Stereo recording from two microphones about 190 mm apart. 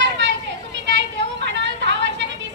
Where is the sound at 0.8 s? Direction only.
70° right (ahead or behind).